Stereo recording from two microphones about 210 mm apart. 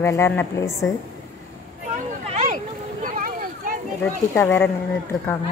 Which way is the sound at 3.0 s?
40° right (ahead or behind).